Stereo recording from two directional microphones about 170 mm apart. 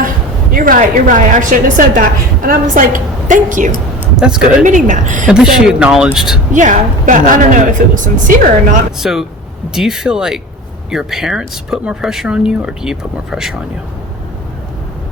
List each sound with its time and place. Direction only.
0.5 s a woman's voice: 55° right (ahead or behind)
4.2 s speech: 5° right (ahead or behind)
4.6 s a woman's voice: 45° right (ahead or behind)
5.2 s speech: centre (ahead or behind)
6.5 s a woman's voice: 50° right (ahead or behind)
9.0 s speech: centre (ahead or behind)